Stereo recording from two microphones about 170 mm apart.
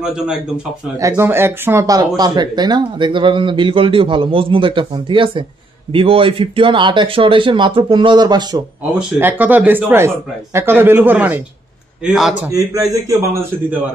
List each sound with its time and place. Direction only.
0.0 s a man's voice: 5° right (ahead or behind)
0.9 s speech: 15° right (ahead or behind)
8.9 s a man's voice: 10° right (ahead or behind)
12.4 s speech: 20° right (ahead or behind)